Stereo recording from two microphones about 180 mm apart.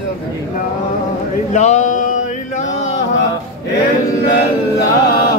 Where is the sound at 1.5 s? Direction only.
40° left (ahead or behind).